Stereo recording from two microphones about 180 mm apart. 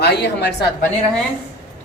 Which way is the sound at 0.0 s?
65° left (ahead or behind).